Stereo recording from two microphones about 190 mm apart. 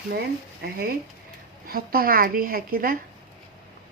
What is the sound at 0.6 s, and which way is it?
A woman's voice, 50° right (ahead or behind).